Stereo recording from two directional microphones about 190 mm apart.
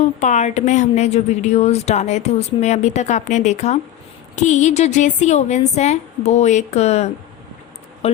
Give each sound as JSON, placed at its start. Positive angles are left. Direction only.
{"t": 0.0, "sound": "a woman's voice", "side_deg": 40}